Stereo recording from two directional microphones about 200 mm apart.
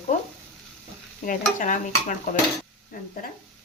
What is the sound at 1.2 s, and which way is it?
Stir, 40° left (ahead or behind).